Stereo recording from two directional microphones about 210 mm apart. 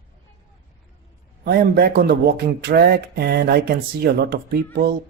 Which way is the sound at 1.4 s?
50° right (ahead or behind).